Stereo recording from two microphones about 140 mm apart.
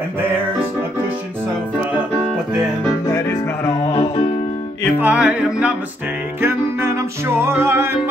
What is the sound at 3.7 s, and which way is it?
Music, 40° left (ahead or behind).